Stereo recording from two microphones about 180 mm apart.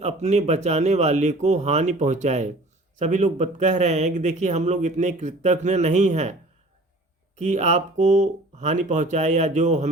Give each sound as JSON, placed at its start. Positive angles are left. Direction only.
{"t": 0.0, "sound": "speech", "side_deg": -40}
{"t": 7.3, "sound": "speech", "side_deg": -40}